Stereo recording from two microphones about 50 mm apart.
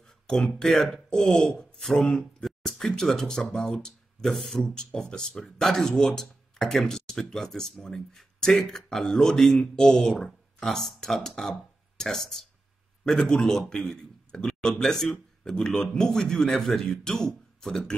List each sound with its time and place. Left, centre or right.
0.0 s speech: centre
1.2 s speech: centre
2.7 s a man's voice: centre